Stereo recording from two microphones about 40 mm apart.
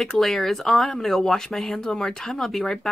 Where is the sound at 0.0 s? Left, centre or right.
Centre.